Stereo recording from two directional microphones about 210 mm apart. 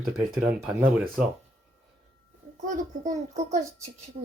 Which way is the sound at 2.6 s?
35° right (ahead or behind).